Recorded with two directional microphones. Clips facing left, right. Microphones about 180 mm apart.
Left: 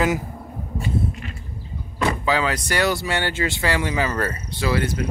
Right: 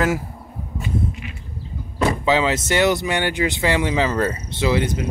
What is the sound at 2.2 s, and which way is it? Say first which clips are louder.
Speech: right 3 dB; 25° right (ahead or behind).